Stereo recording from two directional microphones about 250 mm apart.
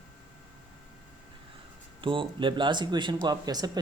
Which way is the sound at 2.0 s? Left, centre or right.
Right.